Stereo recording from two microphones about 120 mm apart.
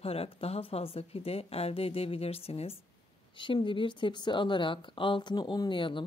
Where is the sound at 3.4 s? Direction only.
45° left (ahead or behind).